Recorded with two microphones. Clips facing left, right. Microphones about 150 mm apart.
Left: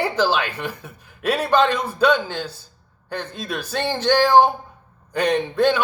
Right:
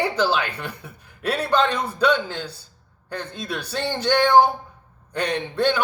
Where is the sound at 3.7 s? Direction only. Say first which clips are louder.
Left 3 dB; 75° left (ahead or behind).